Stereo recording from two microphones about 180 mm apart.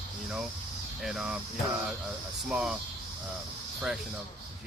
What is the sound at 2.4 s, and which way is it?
Speech, centre (ahead or behind).